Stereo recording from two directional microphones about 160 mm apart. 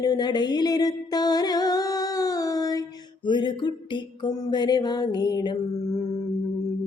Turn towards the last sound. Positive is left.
turn(degrees=25)  # may be behind; listen again after turning